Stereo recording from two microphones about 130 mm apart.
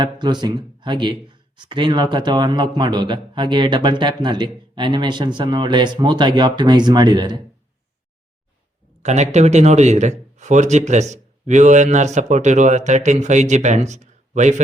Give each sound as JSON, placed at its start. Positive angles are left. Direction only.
{"t": 0.0, "sound": "speech", "side_deg": -35}
{"t": 9.0, "sound": "speech", "side_deg": -60}